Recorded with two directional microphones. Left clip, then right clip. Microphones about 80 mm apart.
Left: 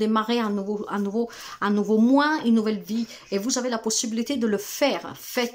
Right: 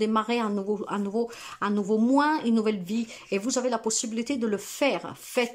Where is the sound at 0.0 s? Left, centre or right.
Centre.